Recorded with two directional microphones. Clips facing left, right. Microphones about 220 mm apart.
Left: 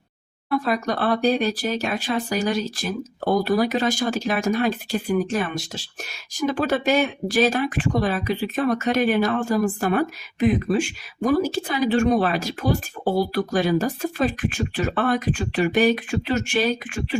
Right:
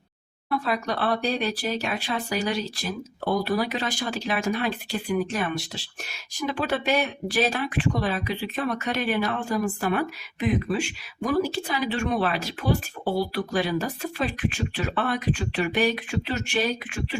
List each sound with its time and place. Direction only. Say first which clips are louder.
0.6 s speech: left 2 dB; 45° left (ahead or behind)